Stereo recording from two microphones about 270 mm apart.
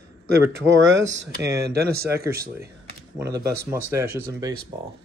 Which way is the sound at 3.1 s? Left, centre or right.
Centre.